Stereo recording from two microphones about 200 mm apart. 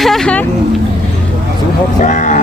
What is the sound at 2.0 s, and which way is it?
Speech, 40° left (ahead or behind).